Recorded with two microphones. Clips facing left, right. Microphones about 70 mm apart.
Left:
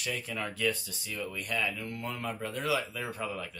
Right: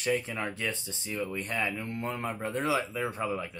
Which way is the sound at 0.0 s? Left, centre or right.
Right.